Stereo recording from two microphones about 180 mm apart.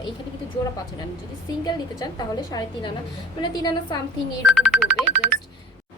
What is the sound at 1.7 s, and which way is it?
A woman's voice, 20° left (ahead or behind).